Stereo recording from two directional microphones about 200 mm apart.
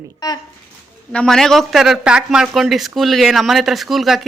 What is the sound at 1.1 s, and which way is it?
Speech, 5° left (ahead or behind).